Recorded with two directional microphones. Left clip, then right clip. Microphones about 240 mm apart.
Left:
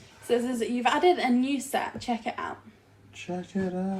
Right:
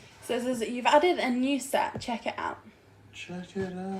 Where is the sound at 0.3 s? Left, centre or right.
Centre.